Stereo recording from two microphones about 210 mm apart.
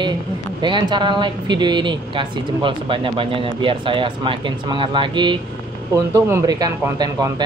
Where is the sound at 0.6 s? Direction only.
20° right (ahead or behind).